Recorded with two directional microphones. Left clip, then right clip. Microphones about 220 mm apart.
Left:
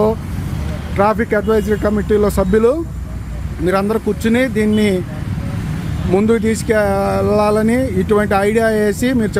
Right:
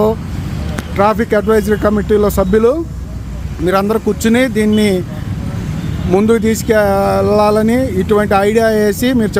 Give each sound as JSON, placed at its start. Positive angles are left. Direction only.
{"t": 0.9, "sound": "speech", "side_deg": 0}
{"t": 6.1, "sound": "speech", "side_deg": 0}